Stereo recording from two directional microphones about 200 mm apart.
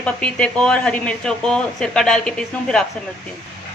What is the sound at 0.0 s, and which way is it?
Speech, 5° left (ahead or behind).